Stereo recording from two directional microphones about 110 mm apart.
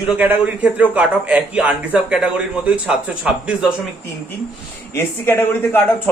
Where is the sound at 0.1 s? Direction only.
15° right (ahead or behind).